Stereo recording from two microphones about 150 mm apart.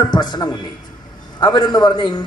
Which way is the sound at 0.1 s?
30° left (ahead or behind).